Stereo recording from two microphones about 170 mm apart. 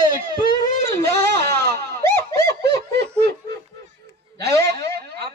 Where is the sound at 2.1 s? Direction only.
15° left (ahead or behind).